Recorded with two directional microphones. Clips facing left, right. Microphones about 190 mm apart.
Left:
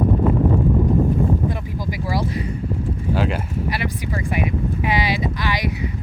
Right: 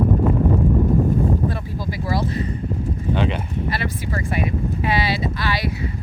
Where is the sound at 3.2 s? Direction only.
5° left (ahead or behind).